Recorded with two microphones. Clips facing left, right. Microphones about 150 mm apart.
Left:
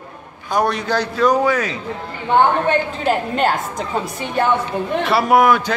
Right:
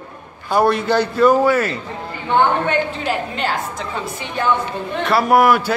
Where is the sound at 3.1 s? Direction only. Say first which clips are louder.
Left 4 dB; 45° left (ahead or behind).